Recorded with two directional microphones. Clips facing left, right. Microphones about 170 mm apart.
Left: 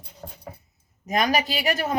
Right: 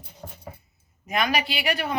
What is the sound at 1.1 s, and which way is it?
Speech, 40° left (ahead or behind).